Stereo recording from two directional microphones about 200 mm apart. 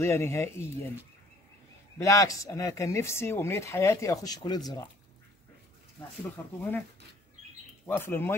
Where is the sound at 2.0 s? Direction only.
15° left (ahead or behind).